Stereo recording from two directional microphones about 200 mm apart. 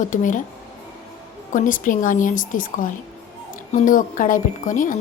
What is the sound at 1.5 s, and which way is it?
A woman's voice, 40° left (ahead or behind).